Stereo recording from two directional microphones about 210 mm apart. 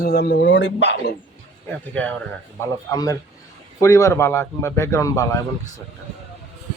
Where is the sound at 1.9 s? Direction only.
5° left (ahead or behind).